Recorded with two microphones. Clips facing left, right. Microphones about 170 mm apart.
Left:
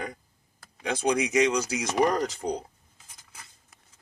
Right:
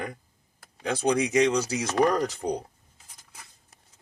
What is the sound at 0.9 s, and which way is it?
Speech, 35° right (ahead or behind).